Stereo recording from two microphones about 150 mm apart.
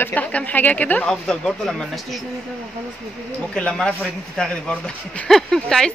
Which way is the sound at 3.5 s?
5° left (ahead or behind).